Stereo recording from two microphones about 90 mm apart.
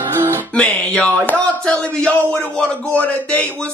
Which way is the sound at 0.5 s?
10° left (ahead or behind).